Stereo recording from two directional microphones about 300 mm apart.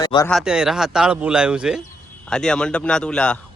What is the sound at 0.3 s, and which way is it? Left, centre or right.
Speech, centre.